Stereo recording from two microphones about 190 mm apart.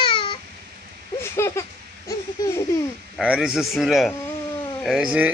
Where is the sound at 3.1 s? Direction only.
5° right (ahead or behind).